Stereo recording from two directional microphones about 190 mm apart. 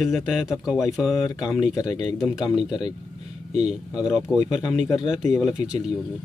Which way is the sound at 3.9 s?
5° right (ahead or behind).